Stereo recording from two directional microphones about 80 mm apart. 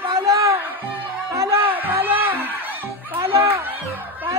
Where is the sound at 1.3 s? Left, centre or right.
Right.